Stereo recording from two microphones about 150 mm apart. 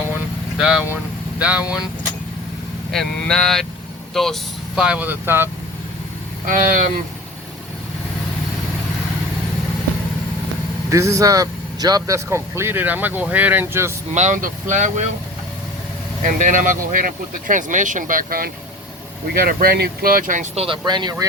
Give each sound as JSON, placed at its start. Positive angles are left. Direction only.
{"t": 0.6, "sound": "speech", "side_deg": -5}
{"t": 2.9, "sound": "speech", "side_deg": 5}
{"t": 6.4, "sound": "speech", "side_deg": -65}
{"t": 10.9, "sound": "speech", "side_deg": -20}
{"t": 14.1, "sound": "speech", "side_deg": -50}
{"t": 16.2, "sound": "speech", "side_deg": -60}
{"t": 20.6, "sound": "speech", "side_deg": -35}